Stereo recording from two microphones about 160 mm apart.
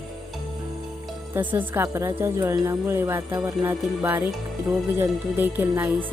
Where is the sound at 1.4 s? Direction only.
10° right (ahead or behind).